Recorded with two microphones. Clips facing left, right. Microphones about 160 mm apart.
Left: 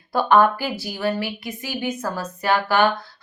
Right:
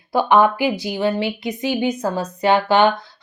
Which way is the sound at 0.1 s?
10° right (ahead or behind).